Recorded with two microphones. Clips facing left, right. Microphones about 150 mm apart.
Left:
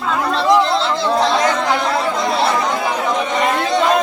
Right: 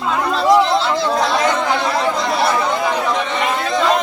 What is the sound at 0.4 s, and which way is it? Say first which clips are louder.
Chatter: right 1 dB; 5° right (ahead or behind).